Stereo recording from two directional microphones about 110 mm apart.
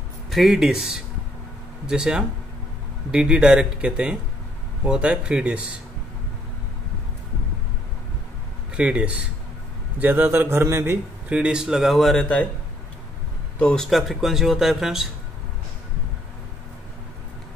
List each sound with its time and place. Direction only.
0.3 s speech: 5° right (ahead or behind)
8.7 s a man's voice: 10° right (ahead or behind)
11.3 s speech: 10° right (ahead or behind)
13.6 s speech: 5° left (ahead or behind)